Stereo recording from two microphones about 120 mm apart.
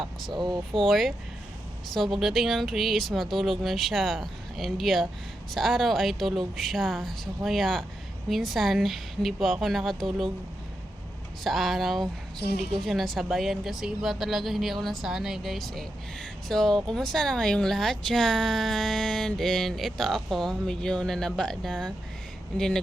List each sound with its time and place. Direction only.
0.3 s speech: 35° right (ahead or behind)
0.9 s a woman's voice: centre (ahead or behind)
11.4 s a woman's voice: centre (ahead or behind)